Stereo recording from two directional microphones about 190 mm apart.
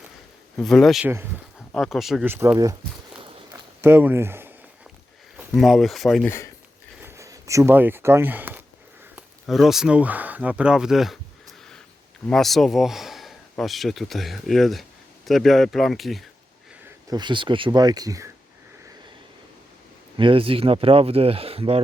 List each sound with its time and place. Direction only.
0.5 s speech: centre (ahead or behind)
2.3 s speech: 15° right (ahead or behind)
3.8 s a sound: 10° right (ahead or behind)
5.4 s speech: centre (ahead or behind)
7.0 s a sound: 15° right (ahead or behind)
9.1 s speech: centre (ahead or behind)
12.3 s speech: centre (ahead or behind)
17.1 s speech: 25° right (ahead or behind)
20.1 s speech: 25° right (ahead or behind)